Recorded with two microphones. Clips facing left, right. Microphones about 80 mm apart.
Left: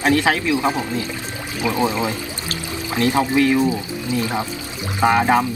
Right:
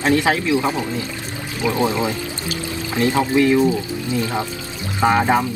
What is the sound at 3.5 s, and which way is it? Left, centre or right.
Speech, left.